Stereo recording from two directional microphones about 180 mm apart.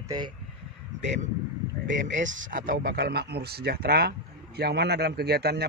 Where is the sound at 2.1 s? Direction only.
45° right (ahead or behind).